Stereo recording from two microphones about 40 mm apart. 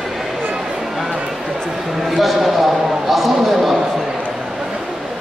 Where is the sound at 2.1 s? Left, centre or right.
Centre.